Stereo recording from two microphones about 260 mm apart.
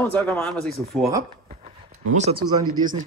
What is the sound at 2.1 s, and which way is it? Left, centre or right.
Speech, right.